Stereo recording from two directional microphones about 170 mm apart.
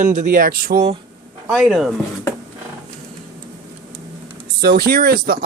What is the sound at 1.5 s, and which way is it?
Speech, centre (ahead or behind).